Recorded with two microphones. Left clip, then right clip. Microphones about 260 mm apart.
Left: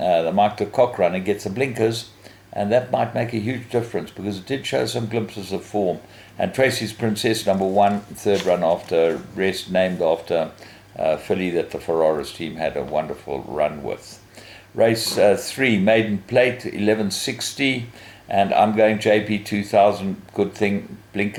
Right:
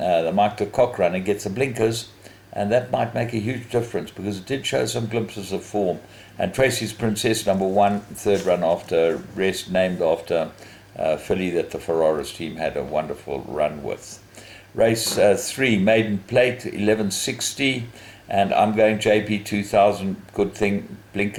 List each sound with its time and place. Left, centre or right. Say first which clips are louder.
0.0 s a sound: left 1 dB; centre
0.8 s speech: left 1 dB; centre
5.5 s speech: left 1 dB; left
6.3 s speech: left 1 dB; centre
7.5 s speech: left 1 dB; left
7.8 s speech: left 1 dB; centre
13.3 s speech: left 1 dB; left
14.8 s speech: left 1 dB; centre